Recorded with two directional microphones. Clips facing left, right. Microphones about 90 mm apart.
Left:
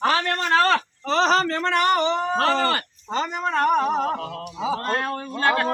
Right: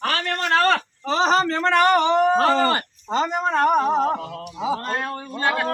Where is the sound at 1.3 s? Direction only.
25° right (ahead or behind).